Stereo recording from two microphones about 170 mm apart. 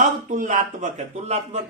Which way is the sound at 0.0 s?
50° right (ahead or behind).